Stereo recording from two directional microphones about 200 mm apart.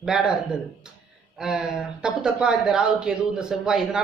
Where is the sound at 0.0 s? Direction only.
5° right (ahead or behind).